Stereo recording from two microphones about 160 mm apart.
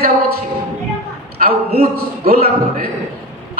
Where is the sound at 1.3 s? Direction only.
70° right (ahead or behind).